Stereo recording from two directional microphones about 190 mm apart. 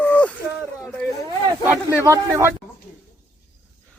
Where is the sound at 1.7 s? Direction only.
15° right (ahead or behind).